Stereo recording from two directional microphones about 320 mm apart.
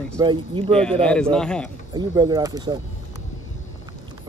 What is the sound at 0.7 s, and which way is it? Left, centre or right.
Speech, centre.